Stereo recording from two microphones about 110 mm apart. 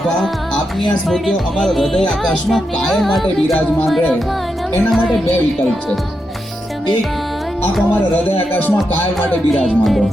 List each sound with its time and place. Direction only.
1.0 s speech: 5° left (ahead or behind)
8.5 s music: 15° left (ahead or behind)
9.5 s speech: centre (ahead or behind)